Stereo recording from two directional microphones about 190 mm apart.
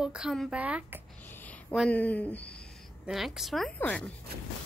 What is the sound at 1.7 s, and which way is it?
A woman's voice, 5° left (ahead or behind).